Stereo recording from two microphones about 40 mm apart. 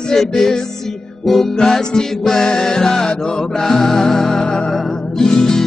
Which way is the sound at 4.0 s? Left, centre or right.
Centre.